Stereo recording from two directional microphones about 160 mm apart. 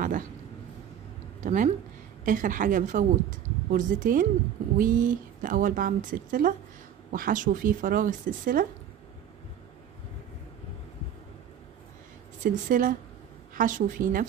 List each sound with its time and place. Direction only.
1.4 s a woman's voice: 50° right (ahead or behind)
12.4 s a woman's voice: 60° right (ahead or behind)